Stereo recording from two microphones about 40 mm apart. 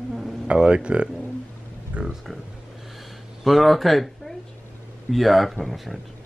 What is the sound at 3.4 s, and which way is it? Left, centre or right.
Speech, centre.